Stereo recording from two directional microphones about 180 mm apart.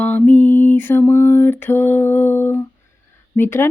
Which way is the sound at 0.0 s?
10° left (ahead or behind).